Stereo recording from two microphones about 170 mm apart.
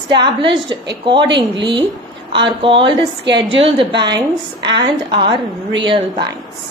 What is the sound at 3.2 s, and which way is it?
Speech, 90° right.